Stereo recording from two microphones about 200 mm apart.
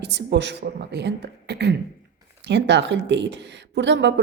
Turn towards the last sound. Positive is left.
turn(degrees=-65)  # may be behind; listen again after turning